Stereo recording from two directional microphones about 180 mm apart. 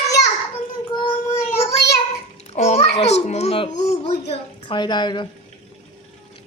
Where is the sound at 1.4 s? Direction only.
40° left (ahead or behind).